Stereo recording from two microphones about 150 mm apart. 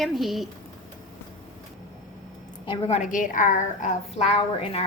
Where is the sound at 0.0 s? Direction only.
Centre (ahead or behind).